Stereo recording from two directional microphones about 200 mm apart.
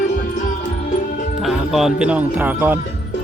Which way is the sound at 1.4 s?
Centre (ahead or behind).